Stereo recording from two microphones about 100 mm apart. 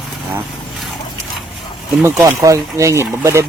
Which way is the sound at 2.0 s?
30° right (ahead or behind).